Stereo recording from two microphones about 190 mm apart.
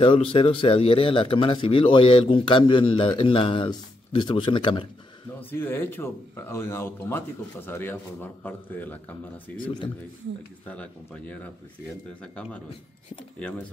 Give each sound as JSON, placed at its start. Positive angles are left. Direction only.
{"t": 0.0, "sound": "a man's voice", "side_deg": 30}
{"t": 5.5, "sound": "speech", "side_deg": 10}
{"t": 10.7, "sound": "speech", "side_deg": 5}